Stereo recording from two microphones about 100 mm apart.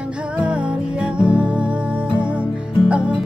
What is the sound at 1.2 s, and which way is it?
Music, 10° right (ahead or behind).